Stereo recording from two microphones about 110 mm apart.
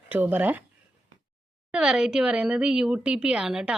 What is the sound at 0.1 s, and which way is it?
Speech, 15° right (ahead or behind).